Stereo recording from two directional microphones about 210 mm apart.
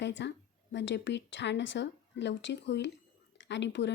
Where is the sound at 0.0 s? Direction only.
60° left (ahead or behind).